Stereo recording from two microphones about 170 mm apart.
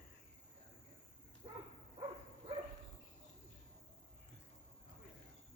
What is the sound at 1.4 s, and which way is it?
Dog, 35° right (ahead or behind).